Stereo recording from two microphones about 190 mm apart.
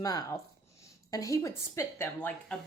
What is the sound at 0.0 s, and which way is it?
A woman's voice, 20° left (ahead or behind).